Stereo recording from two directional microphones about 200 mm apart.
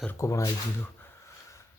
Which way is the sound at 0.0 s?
10° left (ahead or behind).